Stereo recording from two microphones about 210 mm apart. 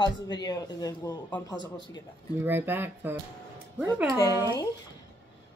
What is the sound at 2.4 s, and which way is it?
Speech, 10° right (ahead or behind).